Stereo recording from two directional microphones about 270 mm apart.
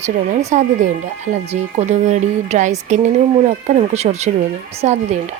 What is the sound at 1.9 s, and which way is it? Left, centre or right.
Speech, right.